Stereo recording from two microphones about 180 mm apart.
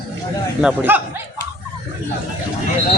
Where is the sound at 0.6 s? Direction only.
10° right (ahead or behind).